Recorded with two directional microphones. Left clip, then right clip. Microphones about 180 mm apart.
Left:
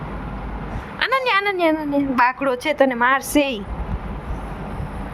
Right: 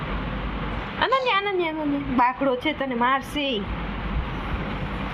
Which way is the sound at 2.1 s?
90° left.